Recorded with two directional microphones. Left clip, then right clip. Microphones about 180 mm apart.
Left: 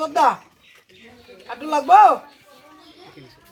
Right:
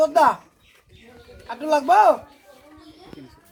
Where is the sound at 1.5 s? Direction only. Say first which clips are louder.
Left 2 dB; 40° right (ahead or behind).